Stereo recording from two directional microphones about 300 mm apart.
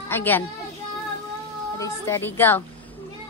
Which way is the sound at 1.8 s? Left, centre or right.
Centre.